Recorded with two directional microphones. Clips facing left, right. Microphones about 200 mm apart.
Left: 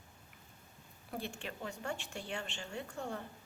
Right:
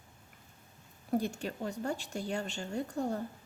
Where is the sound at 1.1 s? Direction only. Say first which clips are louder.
Right 10 dB; 40° right (ahead or behind).